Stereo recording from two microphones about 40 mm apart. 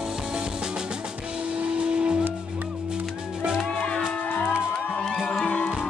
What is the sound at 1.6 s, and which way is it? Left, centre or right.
Music, right.